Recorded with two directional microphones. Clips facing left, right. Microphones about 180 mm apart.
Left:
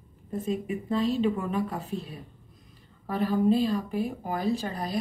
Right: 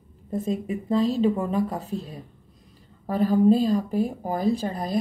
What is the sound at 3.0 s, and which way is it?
Speech, 40° right (ahead or behind).